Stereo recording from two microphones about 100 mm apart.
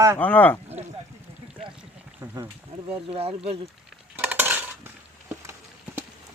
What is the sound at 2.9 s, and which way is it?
Speech, 75° right (ahead or behind).